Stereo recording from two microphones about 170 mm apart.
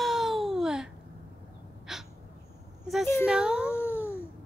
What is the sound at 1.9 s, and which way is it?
Gasp, 5° right (ahead or behind).